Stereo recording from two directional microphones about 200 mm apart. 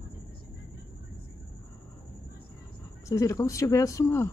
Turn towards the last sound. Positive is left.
turn(degrees=15)  # may be behind; listen again after turning